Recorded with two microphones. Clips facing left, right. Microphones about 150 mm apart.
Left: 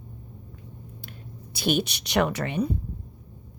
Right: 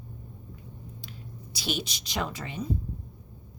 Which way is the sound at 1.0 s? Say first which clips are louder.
Left 1 dB; 55° left (ahead or behind).